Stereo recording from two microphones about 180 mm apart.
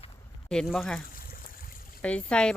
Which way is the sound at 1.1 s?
50° left (ahead or behind).